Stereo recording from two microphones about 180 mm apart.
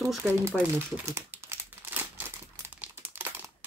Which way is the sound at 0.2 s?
10° right (ahead or behind).